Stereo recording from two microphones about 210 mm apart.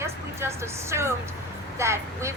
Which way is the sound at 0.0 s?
10° right (ahead or behind).